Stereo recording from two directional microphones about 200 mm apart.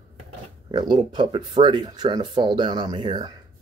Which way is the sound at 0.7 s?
20° right (ahead or behind).